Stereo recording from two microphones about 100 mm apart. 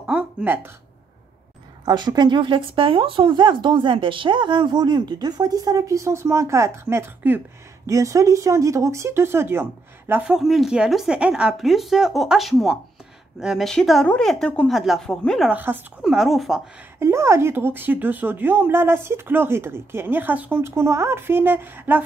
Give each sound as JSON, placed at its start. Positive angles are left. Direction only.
{"t": 0.0, "sound": "a sound", "side_deg": -10}
{"t": 1.9, "sound": "speech", "side_deg": -45}
{"t": 10.2, "sound": "speech", "side_deg": -5}
{"t": 15.4, "sound": "speech", "side_deg": -15}
{"t": 16.0, "sound": "speech", "side_deg": -5}
{"t": 17.0, "sound": "speech", "side_deg": -25}